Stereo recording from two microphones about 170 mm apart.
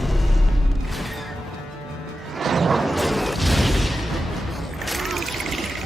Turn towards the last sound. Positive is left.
turn(degrees=0)  # may be behind; listen again after turning